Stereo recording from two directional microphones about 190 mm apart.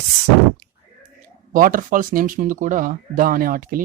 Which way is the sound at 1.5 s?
45° right (ahead or behind).